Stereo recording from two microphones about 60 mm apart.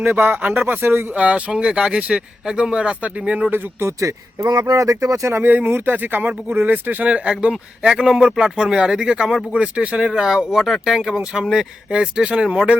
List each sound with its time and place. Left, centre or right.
0.0 s speech: right
1.1 s speech: centre
3.5 s speech: right
3.8 s speech: right
5.3 s speech: right
7.1 s speech: centre